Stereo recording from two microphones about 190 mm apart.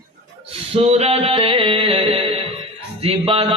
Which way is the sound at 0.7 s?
30° right (ahead or behind).